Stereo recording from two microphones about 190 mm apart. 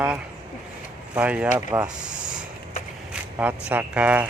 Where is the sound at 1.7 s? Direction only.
20° right (ahead or behind).